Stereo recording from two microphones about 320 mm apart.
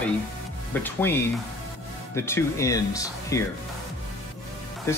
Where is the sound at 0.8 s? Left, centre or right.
Centre.